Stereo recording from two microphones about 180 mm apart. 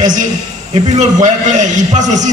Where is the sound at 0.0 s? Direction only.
45° right (ahead or behind).